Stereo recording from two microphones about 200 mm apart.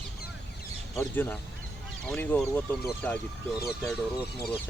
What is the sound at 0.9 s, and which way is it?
Speech, 10° left (ahead or behind).